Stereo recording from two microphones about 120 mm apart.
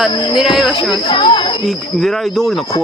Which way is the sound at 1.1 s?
40° left (ahead or behind).